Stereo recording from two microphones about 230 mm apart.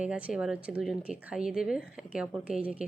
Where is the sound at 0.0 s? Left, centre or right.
Centre.